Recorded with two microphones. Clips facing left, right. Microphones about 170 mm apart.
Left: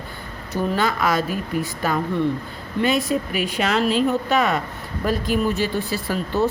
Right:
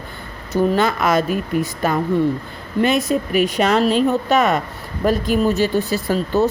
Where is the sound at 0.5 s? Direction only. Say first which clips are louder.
Right 5 dB; 45° right (ahead or behind).